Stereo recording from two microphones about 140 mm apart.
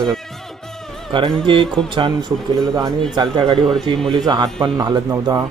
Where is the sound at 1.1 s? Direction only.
35° right (ahead or behind).